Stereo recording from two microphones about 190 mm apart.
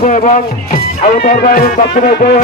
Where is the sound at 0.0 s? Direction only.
40° left (ahead or behind).